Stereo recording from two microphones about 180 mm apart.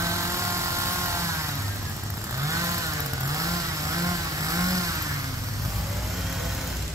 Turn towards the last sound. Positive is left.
turn(degrees=-20)  # may be behind; listen again after turning